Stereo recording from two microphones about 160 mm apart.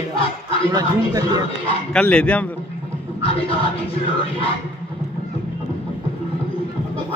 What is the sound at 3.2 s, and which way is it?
Music, 35° left (ahead or behind).